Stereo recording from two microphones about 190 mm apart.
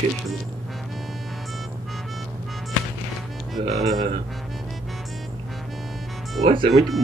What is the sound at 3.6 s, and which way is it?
Speech, 30° right (ahead or behind).